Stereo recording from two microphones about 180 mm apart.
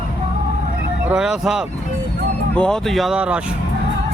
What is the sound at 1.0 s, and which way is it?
Speech, 5° right (ahead or behind).